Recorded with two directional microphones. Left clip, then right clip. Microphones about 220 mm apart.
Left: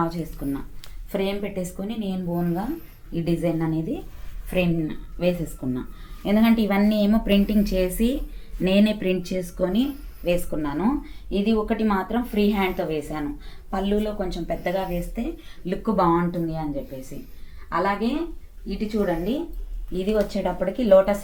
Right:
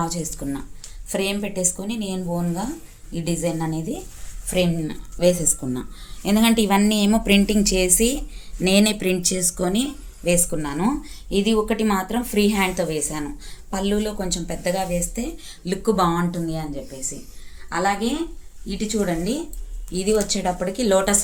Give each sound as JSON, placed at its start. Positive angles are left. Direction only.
{"t": 0.0, "sound": "speech", "side_deg": -50}
{"t": 3.2, "sound": "speech", "side_deg": -30}
{"t": 4.5, "sound": "speech", "side_deg": -45}
{"t": 17.7, "sound": "a woman's voice", "side_deg": -25}
{"t": 18.7, "sound": "speech", "side_deg": -35}